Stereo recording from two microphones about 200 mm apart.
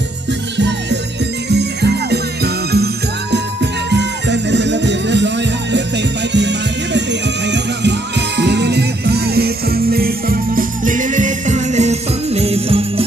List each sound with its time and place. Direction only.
0.6 s music: 60° right (ahead or behind); by 13.0 s 30° right (ahead or behind)